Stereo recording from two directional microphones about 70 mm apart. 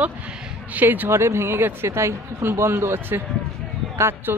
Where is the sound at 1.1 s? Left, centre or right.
Right.